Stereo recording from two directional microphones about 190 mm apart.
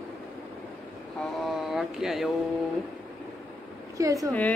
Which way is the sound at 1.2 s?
Centre (ahead or behind).